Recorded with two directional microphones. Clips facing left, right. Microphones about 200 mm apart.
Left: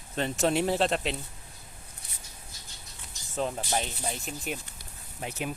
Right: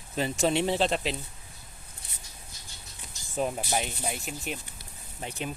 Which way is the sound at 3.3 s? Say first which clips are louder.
Right 1 dB; 10° right (ahead or behind).